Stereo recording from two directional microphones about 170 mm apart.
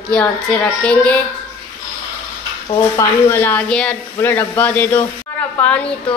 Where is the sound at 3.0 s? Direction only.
15° left (ahead or behind).